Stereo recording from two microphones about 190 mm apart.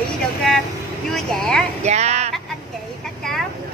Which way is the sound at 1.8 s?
35° right (ahead or behind).